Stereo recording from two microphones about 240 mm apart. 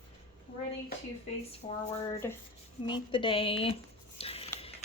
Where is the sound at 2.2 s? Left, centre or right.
Centre.